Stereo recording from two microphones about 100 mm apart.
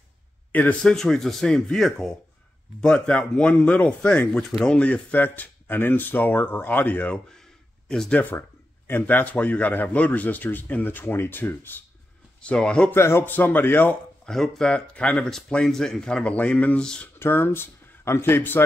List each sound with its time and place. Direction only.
0.5 s speech: 15° left (ahead or behind)
0.9 s speech: 5° left (ahead or behind)
4.5 s speech: centre (ahead or behind)
4.7 s a man's voice: 15° left (ahead or behind)
7.9 s speech: 5° left (ahead or behind)
8.2 s a man's voice: 20° left (ahead or behind)
12.4 s speech: 10° left (ahead or behind)
12.9 s a man's voice: 25° left (ahead or behind)
14.2 s speech: 5° left (ahead or behind)
17.2 s speech: 20° left (ahead or behind)